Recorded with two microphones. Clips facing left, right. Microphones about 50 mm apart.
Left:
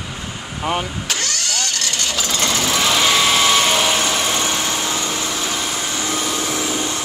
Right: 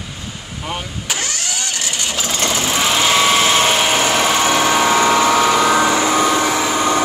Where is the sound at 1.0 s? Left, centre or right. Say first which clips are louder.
Even; centre; by 4.8 s right.